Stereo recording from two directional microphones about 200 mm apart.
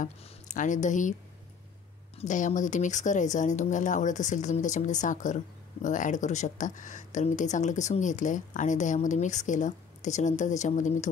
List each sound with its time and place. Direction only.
0.0 s speech: 40° left (ahead or behind)
2.1 s speech: 40° left (ahead or behind)